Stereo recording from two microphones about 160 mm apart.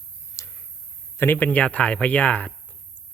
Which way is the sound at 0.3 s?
20° left (ahead or behind).